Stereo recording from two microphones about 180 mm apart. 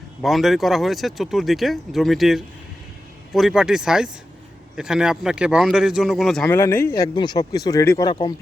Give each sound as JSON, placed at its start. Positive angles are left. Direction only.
{"t": 0.2, "sound": "speech", "side_deg": 0}